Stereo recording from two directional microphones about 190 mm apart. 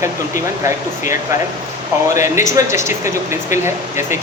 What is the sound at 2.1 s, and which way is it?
Speech, 15° right (ahead or behind).